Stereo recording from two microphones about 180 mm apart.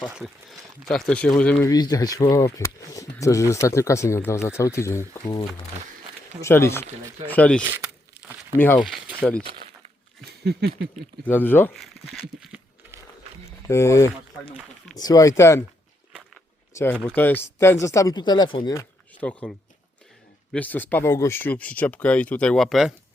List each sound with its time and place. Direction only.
0.9 s speech: centre (ahead or behind)
1.6 s speech: 20° left (ahead or behind)
6.4 s speech: 15° left (ahead or behind)
8.8 s speech: centre (ahead or behind)
10.2 s a sound: 65° right (ahead or behind)
11.3 s speech: 10° left (ahead or behind)
11.8 s speech: centre (ahead or behind)
13.6 s speech: 15° left (ahead or behind)
16.7 s speech: 10° left (ahead or behind); by 18.7 s 25° left (ahead or behind)
18.7 s speech: 10° left (ahead or behind)